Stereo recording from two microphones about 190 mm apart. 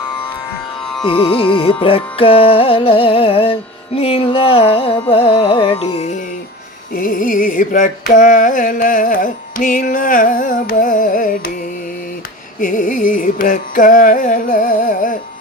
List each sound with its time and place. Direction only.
1.0 s music: 30° left (ahead or behind)
6.9 s music: 50° left (ahead or behind)
12.5 s carnatic music: 45° left (ahead or behind)